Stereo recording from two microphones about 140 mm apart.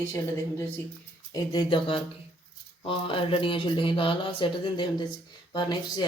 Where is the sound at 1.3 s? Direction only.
30° left (ahead or behind).